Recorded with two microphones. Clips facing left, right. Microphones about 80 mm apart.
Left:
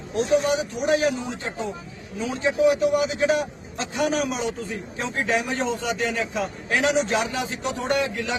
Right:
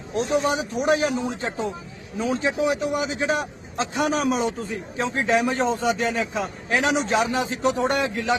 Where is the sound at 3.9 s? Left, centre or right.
Right.